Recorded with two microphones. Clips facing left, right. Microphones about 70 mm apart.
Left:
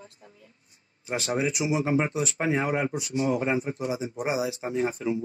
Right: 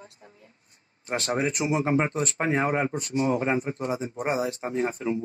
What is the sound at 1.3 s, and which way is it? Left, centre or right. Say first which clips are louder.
A man's voice: even; right.